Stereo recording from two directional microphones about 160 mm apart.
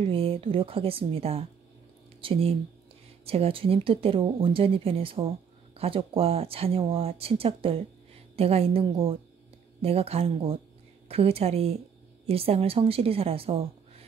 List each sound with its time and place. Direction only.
0.0 s speech: 35° right (ahead or behind)